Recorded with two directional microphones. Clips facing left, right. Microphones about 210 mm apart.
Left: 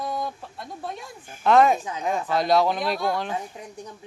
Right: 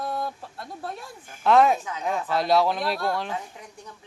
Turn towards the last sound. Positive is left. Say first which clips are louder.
# left 5 dB
turn(degrees=20)  # may be behind; listen again after turning